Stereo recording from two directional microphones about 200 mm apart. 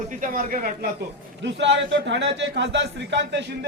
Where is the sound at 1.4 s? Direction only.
60° right (ahead or behind).